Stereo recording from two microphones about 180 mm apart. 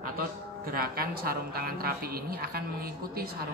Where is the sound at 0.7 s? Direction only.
55° right (ahead or behind).